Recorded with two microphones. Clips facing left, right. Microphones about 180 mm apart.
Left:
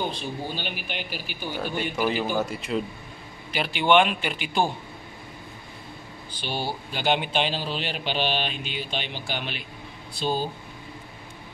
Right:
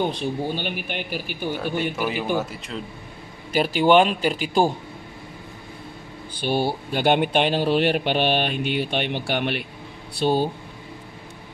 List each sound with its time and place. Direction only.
0.0 s speech: 60° right (ahead or behind)
2.0 s a man's voice: 5° right (ahead or behind)
3.5 s a man's voice: 40° right (ahead or behind)
6.4 s speech: 55° right (ahead or behind)